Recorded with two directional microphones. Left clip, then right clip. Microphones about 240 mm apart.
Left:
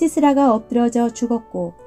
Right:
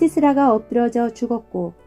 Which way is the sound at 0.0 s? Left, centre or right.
Left.